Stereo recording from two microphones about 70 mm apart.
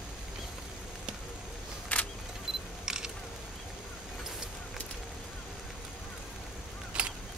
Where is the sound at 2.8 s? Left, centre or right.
Centre.